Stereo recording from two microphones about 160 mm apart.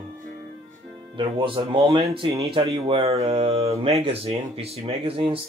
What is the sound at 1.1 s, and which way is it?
Speech, 35° right (ahead or behind).